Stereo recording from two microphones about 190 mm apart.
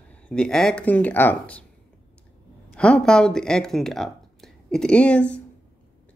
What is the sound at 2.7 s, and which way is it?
Speech, 5° left (ahead or behind).